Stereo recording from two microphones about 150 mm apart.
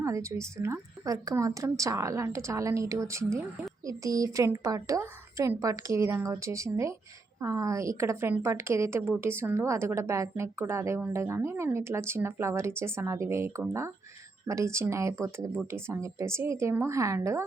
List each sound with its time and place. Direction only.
0.0 s a woman's voice: 20° right (ahead or behind)